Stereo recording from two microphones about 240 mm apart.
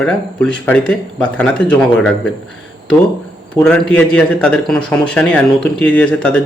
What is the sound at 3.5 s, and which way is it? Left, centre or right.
Speech, centre.